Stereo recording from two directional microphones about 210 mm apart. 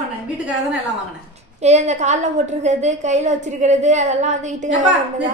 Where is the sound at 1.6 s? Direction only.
30° right (ahead or behind).